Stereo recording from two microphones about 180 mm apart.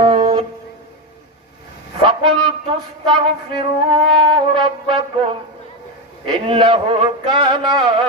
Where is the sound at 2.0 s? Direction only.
25° right (ahead or behind).